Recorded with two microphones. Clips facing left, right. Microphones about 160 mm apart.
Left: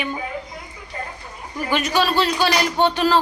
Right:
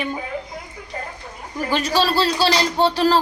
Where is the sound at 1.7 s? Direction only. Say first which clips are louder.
Even; 35° right (ahead or behind).